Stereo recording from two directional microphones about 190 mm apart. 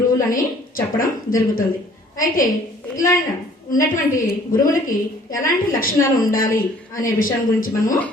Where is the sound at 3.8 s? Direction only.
45° left (ahead or behind).